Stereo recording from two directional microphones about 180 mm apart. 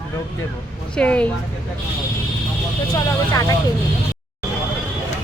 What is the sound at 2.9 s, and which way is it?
Speech, 20° left (ahead or behind).